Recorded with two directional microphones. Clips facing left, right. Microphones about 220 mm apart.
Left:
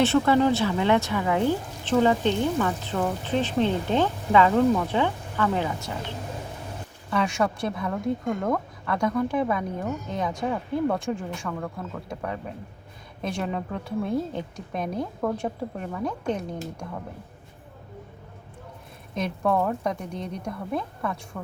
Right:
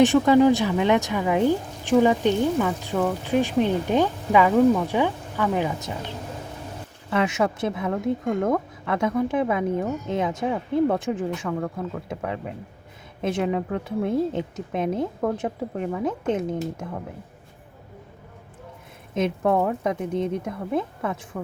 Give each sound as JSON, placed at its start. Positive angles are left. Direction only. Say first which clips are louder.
{"t": 0.0, "sound": "a woman's voice", "louder": "right 4 dB", "side_deg": -15}
{"t": 7.1, "sound": "a woman's voice", "louder": "right 2 dB", "side_deg": -20}
{"t": 19.1, "sound": "a woman's voice", "louder": "right 3 dB", "side_deg": -20}